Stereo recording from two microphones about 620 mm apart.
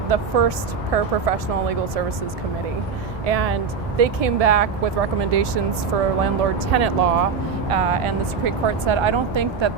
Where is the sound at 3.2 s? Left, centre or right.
Right.